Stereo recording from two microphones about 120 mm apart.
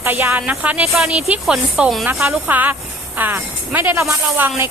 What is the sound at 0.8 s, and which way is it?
Speech, centre (ahead or behind).